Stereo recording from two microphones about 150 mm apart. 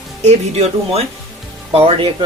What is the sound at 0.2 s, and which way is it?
Speech, 45° right (ahead or behind).